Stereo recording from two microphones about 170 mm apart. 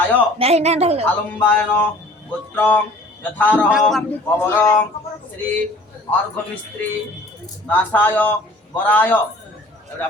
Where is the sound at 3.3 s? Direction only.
10° left (ahead or behind).